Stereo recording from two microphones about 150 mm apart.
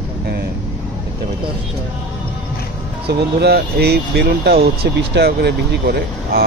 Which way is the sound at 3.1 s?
90° right.